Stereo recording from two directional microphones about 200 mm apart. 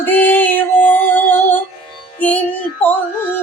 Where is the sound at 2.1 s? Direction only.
5° left (ahead or behind).